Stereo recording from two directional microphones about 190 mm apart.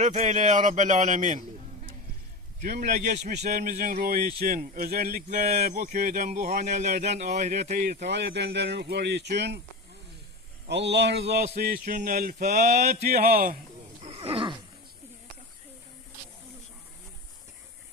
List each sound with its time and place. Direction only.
0.0 s a man's voice: 40° right (ahead or behind)
2.6 s a man's voice: 40° right (ahead or behind)
3.5 s speech: 50° right (ahead or behind)
5.5 s speech: 40° right (ahead or behind); by 9.6 s 60° right (ahead or behind)
10.7 s a man's voice: 65° right (ahead or behind); by 13.0 s 40° right (ahead or behind)
13.1 s speech: 50° right (ahead or behind)
14.0 s wild animals: 30° right (ahead or behind)